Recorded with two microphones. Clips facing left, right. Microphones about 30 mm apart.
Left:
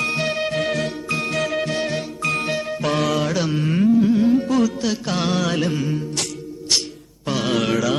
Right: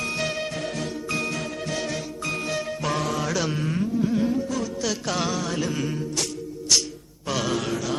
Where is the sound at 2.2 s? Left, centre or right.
Left.